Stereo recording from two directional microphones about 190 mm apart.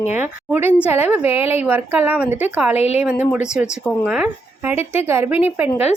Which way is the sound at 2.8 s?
35° left (ahead or behind).